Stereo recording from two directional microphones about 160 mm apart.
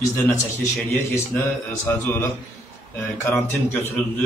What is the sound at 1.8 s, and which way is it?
A man's voice, 15° left (ahead or behind).